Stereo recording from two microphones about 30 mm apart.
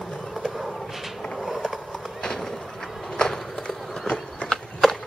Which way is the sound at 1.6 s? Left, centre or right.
Centre.